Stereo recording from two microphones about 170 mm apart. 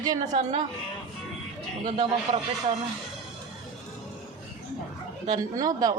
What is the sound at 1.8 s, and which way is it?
Speech, 40° right (ahead or behind).